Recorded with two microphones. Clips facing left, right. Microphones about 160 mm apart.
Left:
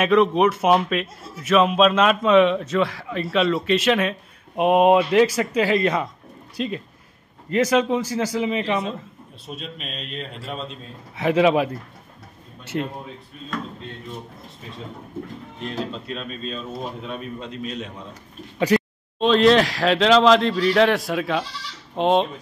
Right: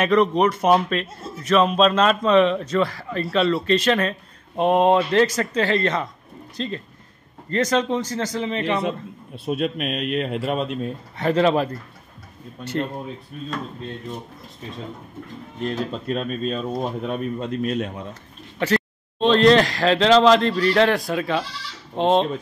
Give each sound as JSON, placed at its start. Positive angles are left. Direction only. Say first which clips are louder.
{"t": 0.0, "sound": "speech", "louder": "left 1 dB", "side_deg": 5}
{"t": 9.5, "sound": "speech", "louder": "right 11 dB", "side_deg": -60}
{"t": 11.1, "sound": "speech", "louder": "left 1 dB", "side_deg": 5}
{"t": 15.6, "sound": "speech", "louder": "right 4 dB", "side_deg": -45}
{"t": 18.7, "sound": "a sound", "louder": "left 3 dB", "side_deg": 15}
{"t": 19.1, "sound": "speech", "louder": "right 1 dB", "side_deg": 0}